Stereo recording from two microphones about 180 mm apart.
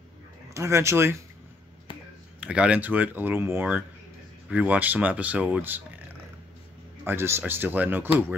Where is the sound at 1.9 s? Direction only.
25° left (ahead or behind).